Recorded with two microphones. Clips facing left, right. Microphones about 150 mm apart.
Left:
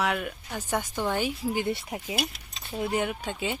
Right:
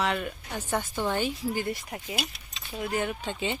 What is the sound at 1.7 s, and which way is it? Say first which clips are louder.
Speech: left 3 dB; 30° left (ahead or behind).